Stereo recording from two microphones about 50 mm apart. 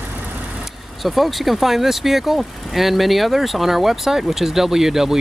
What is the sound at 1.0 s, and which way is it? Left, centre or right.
Speech, centre.